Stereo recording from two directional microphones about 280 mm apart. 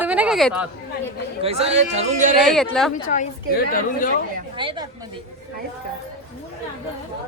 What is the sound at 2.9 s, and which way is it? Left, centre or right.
A woman's voice, left.